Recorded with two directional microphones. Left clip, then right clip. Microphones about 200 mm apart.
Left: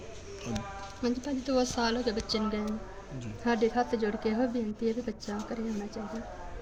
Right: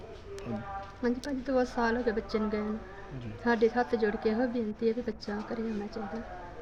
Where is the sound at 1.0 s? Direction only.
5° right (ahead or behind).